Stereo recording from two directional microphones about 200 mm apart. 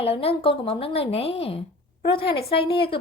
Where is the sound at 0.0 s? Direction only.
30° left (ahead or behind).